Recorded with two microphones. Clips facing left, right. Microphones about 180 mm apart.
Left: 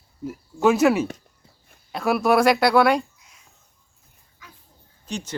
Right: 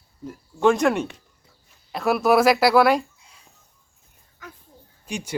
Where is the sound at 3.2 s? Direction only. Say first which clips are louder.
Right 2 dB; 30° right (ahead or behind).